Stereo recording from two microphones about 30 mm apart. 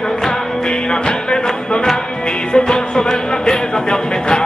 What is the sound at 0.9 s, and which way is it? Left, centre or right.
Music, left.